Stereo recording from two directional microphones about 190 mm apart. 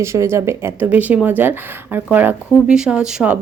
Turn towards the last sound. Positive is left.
turn(degrees=-5)  # may be behind; listen again after turning